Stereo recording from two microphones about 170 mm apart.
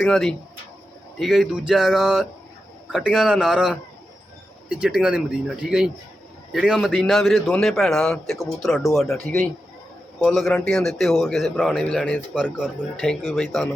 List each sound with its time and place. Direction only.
0.0 s a man's voice: 5° left (ahead or behind)
4.8 s a man's voice: 5° right (ahead or behind)